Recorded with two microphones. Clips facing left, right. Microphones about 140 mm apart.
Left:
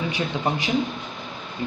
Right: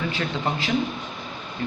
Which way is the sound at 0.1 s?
15° left (ahead or behind).